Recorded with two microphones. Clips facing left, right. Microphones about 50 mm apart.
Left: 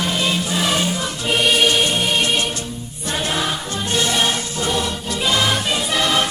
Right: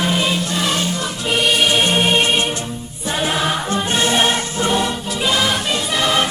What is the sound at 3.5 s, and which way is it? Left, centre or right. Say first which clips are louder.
Music: right 3 dB; right.